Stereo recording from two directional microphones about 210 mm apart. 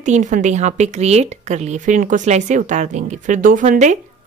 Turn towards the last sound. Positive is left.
turn(degrees=-35)  # may be behind; listen again after turning